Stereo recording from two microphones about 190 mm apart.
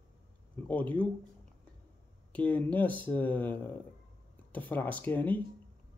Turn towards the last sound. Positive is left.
turn(degrees=10)  # may be behind; listen again after turning